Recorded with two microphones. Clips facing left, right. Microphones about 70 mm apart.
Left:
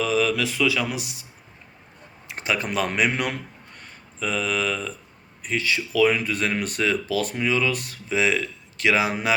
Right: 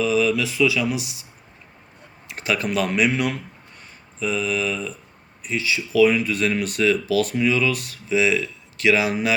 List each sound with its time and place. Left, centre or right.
0.0 s speech: left
2.2 s speech: left